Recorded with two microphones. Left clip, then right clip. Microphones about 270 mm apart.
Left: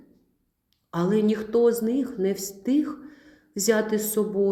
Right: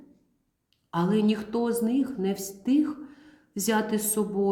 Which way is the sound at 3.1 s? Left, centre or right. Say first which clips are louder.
Left 2 dB; right.